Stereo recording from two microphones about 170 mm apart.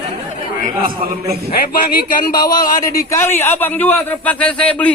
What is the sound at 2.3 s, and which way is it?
A man's voice, 25° left (ahead or behind).